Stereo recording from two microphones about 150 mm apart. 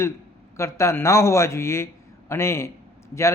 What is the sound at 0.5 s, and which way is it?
A man's voice, 20° left (ahead or behind).